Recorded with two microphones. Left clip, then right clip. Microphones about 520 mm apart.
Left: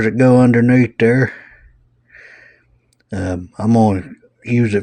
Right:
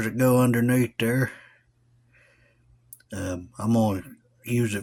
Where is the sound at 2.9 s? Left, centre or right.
Right.